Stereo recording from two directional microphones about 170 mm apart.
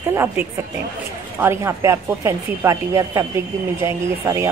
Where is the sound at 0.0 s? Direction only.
15° right (ahead or behind).